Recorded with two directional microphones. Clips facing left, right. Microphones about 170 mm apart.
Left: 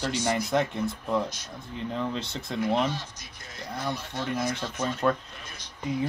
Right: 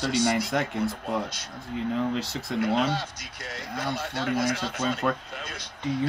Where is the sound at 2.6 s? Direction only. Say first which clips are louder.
Right 1 dB; 70° right (ahead or behind).